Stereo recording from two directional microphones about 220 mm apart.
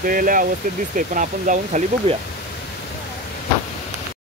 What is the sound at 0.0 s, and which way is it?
Speech, 40° right (ahead or behind).